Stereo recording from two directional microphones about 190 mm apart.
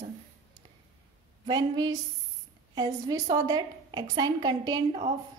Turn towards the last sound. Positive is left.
turn(degrees=-20)  # may be behind; listen again after turning